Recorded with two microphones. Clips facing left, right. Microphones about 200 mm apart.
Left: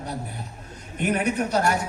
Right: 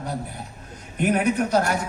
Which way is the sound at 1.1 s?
60° right (ahead or behind).